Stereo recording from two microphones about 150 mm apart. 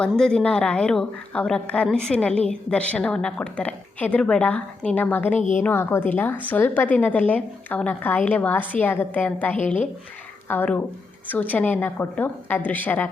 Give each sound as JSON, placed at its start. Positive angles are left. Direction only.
{"t": 0.0, "sound": "a woman's voice", "side_deg": 5}
{"t": 5.4, "sound": "a woman's voice", "side_deg": 55}
{"t": 5.6, "sound": "a woman's voice", "side_deg": 15}